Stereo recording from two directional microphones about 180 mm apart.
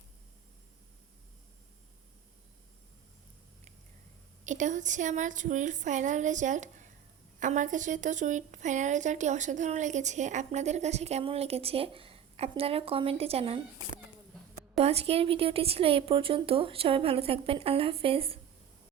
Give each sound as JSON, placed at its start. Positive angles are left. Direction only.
{"t": 4.4, "sound": "a woman's voice", "side_deg": -45}
{"t": 14.8, "sound": "a woman's voice", "side_deg": -35}